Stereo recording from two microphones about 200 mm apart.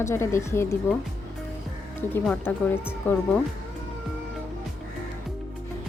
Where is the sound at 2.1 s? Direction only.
5° left (ahead or behind).